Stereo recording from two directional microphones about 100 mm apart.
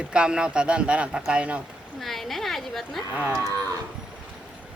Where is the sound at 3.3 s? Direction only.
30° right (ahead or behind).